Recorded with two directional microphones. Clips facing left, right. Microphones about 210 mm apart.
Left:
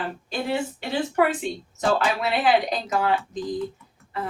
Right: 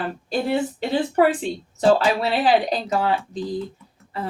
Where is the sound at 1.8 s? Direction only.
30° right (ahead or behind).